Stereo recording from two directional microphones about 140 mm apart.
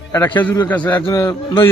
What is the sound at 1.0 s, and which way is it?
Speech, 25° left (ahead or behind).